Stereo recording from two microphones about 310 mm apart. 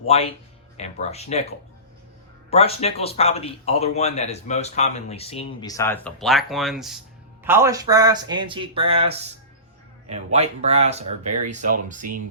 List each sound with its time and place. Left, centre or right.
0.1 s a man's voice: centre
2.5 s a man's voice: centre
10.3 s speech: right